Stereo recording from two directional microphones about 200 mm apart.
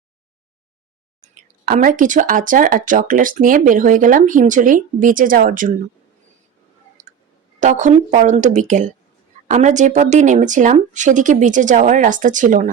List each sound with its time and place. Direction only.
1.6 s speech: 45° right (ahead or behind)
7.6 s speech: 40° right (ahead or behind)